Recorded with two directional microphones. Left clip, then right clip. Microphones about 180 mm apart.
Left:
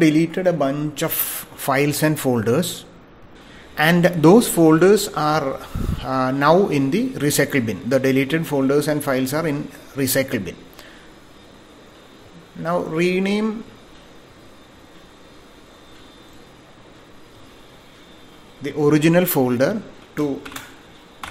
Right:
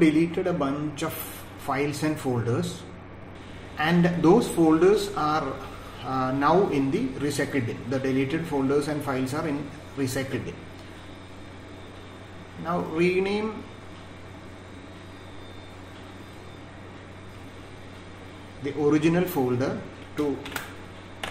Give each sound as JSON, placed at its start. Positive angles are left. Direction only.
{"t": 0.0, "sound": "a man's voice", "side_deg": 50}
{"t": 3.7, "sound": "a man's voice", "side_deg": 55}
{"t": 12.6, "sound": "a man's voice", "side_deg": 50}
{"t": 18.6, "sound": "a man's voice", "side_deg": 55}